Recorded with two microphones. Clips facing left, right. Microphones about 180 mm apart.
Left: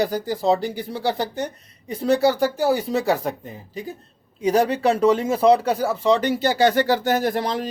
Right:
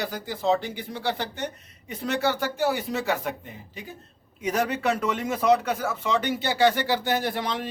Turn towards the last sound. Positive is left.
turn(degrees=40)  # may be behind; listen again after turning